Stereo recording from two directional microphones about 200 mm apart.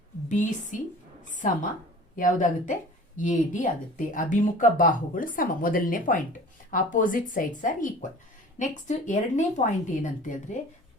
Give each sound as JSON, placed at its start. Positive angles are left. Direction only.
{"t": 0.3, "sound": "a woman's voice", "side_deg": 40}